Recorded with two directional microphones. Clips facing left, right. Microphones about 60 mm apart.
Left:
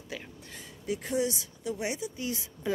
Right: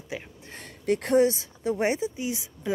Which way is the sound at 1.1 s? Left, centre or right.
Right.